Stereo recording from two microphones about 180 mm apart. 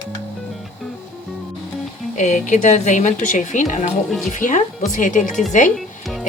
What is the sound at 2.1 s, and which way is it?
A woman's voice, 40° left (ahead or behind).